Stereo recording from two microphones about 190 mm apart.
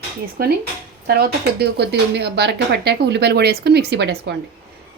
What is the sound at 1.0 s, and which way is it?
Speech, 55° right (ahead or behind).